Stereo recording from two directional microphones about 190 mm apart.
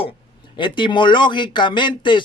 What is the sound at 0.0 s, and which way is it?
Speech, 25° left (ahead or behind).